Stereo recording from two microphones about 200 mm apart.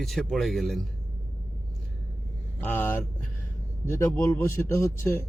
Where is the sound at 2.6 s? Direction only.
10° left (ahead or behind).